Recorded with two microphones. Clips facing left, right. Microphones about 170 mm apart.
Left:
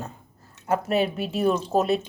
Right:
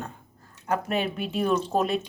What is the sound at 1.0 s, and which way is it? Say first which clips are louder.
Speech: left 3 dB; 40° left (ahead or behind).